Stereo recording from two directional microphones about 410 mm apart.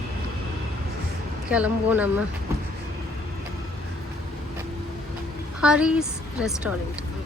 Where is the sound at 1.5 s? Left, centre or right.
Centre.